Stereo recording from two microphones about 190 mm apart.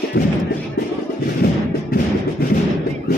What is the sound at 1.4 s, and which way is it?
Music, 55° left (ahead or behind).